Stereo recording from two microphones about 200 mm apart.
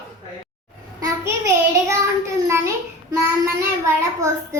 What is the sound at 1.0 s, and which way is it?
Child singing, 15° right (ahead or behind).